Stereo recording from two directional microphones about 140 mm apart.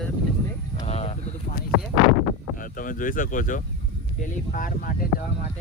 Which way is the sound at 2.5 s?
75° left (ahead or behind).